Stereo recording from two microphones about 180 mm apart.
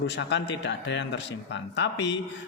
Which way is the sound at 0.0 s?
75° left (ahead or behind).